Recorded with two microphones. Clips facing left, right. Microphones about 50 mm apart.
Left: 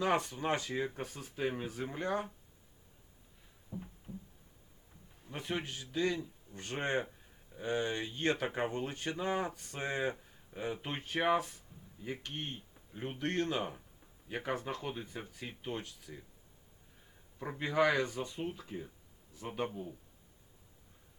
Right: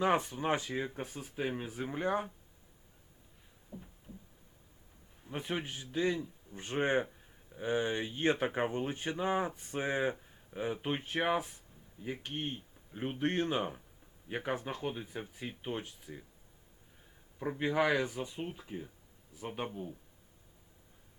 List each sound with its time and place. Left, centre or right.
0.0 s speech: centre
5.2 s speech: centre
12.9 s speech: right
17.6 s a man's voice: centre